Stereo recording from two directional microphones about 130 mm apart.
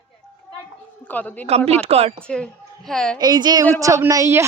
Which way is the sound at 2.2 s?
5° left (ahead or behind).